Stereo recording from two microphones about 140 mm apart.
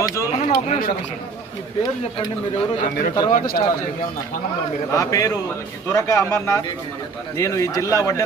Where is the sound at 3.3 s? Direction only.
80° left.